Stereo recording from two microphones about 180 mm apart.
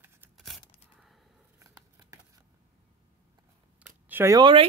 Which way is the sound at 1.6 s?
20° right (ahead or behind).